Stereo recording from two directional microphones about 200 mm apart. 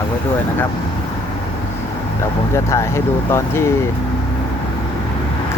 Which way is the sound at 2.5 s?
15° left (ahead or behind).